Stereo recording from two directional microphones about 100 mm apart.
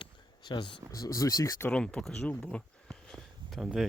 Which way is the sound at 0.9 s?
35° left (ahead or behind).